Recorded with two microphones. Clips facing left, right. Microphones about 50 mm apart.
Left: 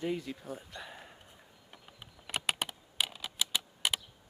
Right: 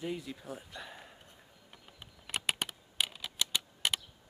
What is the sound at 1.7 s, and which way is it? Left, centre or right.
Computer keyboard, centre.